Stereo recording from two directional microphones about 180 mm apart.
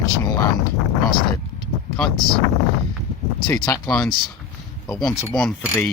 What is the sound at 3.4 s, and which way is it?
Speech, 15° left (ahead or behind).